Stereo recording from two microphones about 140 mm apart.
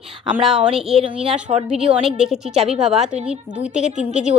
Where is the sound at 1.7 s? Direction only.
5° right (ahead or behind).